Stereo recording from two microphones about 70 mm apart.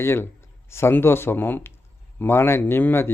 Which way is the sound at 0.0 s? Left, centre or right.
Left.